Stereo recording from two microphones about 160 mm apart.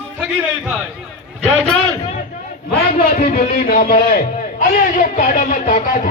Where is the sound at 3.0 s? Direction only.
65° left (ahead or behind).